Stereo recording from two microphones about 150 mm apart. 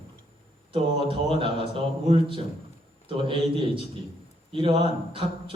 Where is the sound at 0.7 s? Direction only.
35° right (ahead or behind).